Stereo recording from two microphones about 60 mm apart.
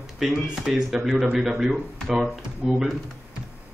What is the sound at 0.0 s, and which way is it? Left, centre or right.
Speech, centre.